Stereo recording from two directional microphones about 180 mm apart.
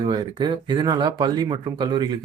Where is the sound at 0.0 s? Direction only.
25° right (ahead or behind).